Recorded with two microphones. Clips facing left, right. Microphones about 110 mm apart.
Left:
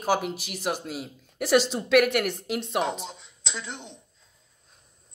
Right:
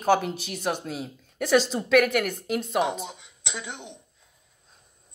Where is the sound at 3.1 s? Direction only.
15° right (ahead or behind).